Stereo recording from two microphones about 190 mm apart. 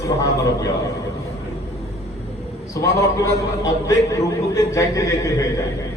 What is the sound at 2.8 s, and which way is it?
A man's voice, 15° left (ahead or behind).